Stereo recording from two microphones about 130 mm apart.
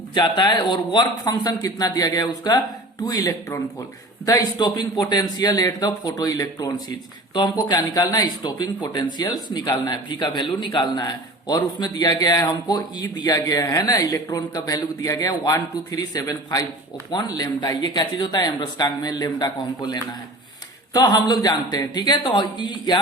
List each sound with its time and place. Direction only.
0.1 s speech: 35° left (ahead or behind)